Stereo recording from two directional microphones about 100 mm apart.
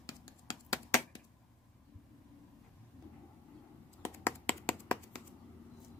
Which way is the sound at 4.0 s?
20° left (ahead or behind).